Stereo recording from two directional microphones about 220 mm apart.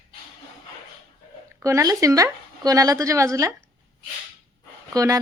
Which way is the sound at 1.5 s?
15° right (ahead or behind).